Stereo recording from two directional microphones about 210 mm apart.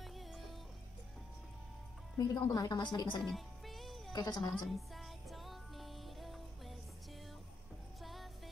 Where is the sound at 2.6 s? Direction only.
20° left (ahead or behind).